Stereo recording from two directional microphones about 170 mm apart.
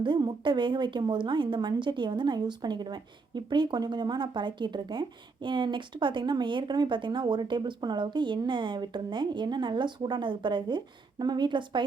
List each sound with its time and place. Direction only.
0.0 s a woman's voice: 25° right (ahead or behind)